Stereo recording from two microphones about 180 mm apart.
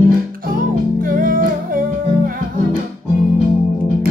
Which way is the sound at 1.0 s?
50° right (ahead or behind).